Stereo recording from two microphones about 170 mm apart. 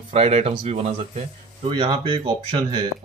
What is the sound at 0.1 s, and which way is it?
Speech, 35° right (ahead or behind).